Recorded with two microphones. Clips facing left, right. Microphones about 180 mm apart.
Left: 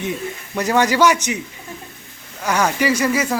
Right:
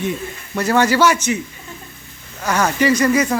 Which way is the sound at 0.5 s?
15° left (ahead or behind).